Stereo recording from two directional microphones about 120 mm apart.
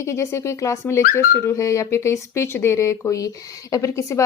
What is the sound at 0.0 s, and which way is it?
Speech, 25° left (ahead or behind).